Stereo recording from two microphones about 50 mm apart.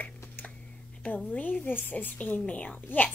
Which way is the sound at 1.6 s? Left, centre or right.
Left.